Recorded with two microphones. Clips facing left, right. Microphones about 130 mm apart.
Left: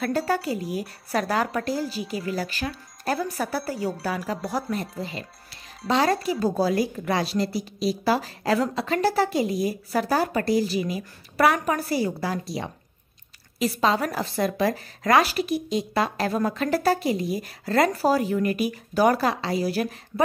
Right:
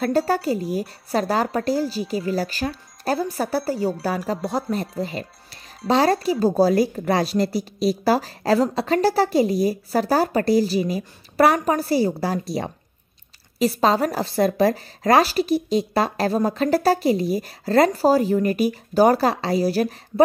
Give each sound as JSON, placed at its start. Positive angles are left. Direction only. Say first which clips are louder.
{"t": 0.0, "sound": "a woman's voice", "louder": "right 4 dB", "side_deg": -35}
{"t": 4.9, "sound": "a woman's voice", "louder": "right 6 dB", "side_deg": -40}